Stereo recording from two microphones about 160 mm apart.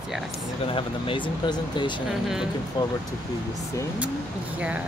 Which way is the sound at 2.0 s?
Centre (ahead or behind).